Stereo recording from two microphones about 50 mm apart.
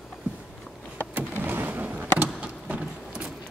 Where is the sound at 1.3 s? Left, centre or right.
Right.